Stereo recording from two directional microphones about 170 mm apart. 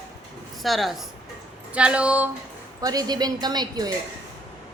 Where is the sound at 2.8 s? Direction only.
20° right (ahead or behind).